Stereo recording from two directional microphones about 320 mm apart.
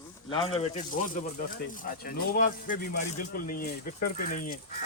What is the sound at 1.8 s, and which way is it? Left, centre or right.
Speech, left.